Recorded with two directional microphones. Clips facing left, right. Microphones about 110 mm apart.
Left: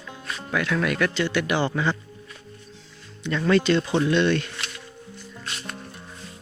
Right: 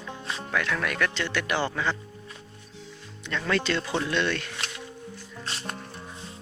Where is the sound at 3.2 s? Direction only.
5° left (ahead or behind).